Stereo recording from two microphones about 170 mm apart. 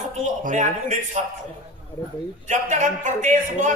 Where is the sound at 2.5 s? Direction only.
45° right (ahead or behind).